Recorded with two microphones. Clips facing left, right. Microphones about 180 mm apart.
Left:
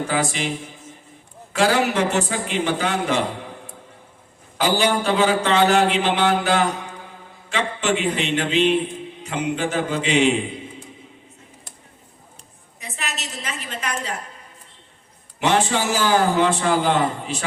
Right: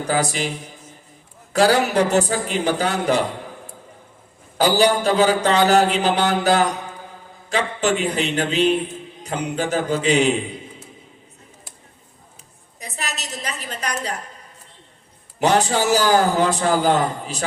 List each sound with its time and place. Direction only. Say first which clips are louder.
0.1 s a man's voice: right 1 dB; 40° right (ahead or behind)
4.5 s a man's voice: right 3 dB; 35° right (ahead or behind)
12.8 s a woman's voice: right 1 dB; 40° right (ahead or behind)
15.4 s a man's voice: right 2 dB; 40° right (ahead or behind)